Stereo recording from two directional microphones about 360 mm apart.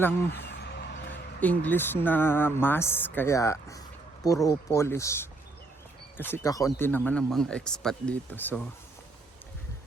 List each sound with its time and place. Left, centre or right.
0.0 s speech: centre
0.4 s vehicle: left
1.4 s speech: centre